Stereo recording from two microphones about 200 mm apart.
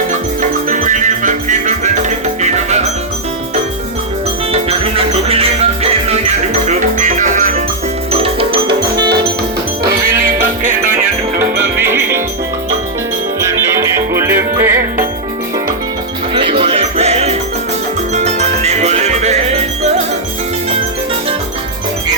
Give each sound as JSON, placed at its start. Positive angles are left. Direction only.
{"t": 0.7, "sound": "music", "side_deg": -40}
{"t": 4.5, "sound": "music", "side_deg": -30}
{"t": 8.1, "sound": "music", "side_deg": -30}
{"t": 10.1, "sound": "music", "side_deg": -45}
{"t": 11.3, "sound": "music", "side_deg": -10}
{"t": 14.1, "sound": "music", "side_deg": -10}
{"t": 16.3, "sound": "music", "side_deg": -25}